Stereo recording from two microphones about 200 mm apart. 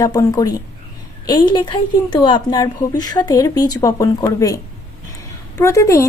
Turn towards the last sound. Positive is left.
turn(degrees=15)  # may be behind; listen again after turning